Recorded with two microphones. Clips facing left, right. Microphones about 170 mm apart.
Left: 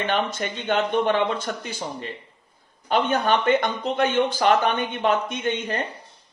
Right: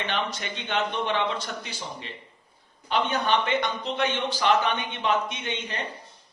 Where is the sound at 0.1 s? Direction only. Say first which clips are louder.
Left 5 dB; 50° left (ahead or behind).